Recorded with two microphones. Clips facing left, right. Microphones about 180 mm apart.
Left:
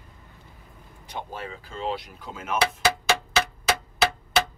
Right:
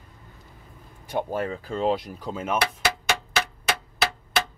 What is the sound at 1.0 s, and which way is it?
Speech, 50° right (ahead or behind).